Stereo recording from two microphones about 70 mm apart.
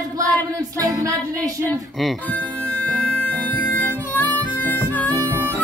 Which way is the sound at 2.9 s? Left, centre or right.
Centre.